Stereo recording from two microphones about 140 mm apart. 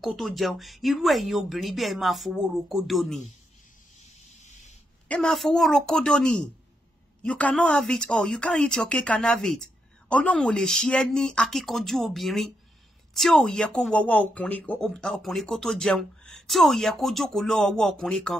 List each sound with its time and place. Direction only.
0.0 s speech: centre (ahead or behind)
4.4 s sanding: 55° left (ahead or behind)
5.0 s speech: 5° left (ahead or behind)